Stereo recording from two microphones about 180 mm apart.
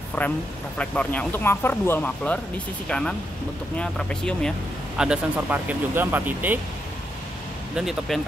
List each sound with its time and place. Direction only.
0.2 s speech: 10° left (ahead or behind); by 6.6 s 10° right (ahead or behind)
7.7 s speech: centre (ahead or behind)